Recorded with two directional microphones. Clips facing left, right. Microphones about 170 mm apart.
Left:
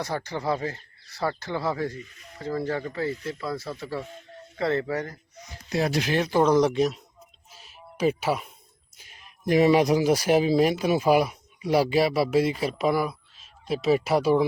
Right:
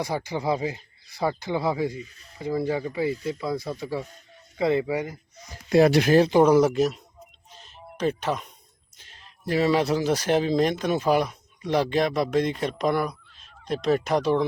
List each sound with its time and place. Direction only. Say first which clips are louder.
0.0 s speech: right 2 dB; 10° right (ahead or behind)
5.6 s speech: right 8 dB; 60° right (ahead or behind)
6.1 s speech: right 7 dB; 35° right (ahead or behind)
6.3 s speech: right 2 dB; 10° right (ahead or behind)
7.5 s a sound: right 2 dB; 5° left (ahead or behind)
9.0 s music: even; 10° left (ahead or behind)
9.5 s speech: left 3 dB; 15° left (ahead or behind)